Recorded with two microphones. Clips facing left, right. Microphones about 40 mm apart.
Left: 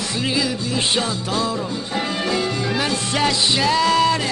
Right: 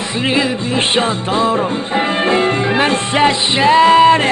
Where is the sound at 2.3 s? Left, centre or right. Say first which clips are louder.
Right 7 dB; right.